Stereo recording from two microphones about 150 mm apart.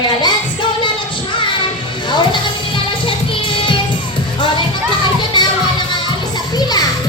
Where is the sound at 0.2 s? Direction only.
30° left (ahead or behind).